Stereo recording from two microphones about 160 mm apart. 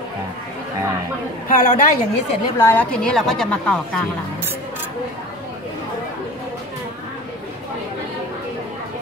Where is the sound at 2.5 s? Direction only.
10° left (ahead or behind).